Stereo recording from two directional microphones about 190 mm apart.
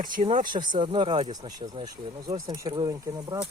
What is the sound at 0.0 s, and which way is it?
Speech, 45° right (ahead or behind).